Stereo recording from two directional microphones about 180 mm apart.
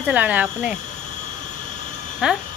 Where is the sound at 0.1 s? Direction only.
10° right (ahead or behind).